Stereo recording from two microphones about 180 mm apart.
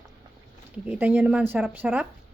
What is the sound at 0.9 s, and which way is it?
A woman's voice, 10° right (ahead or behind).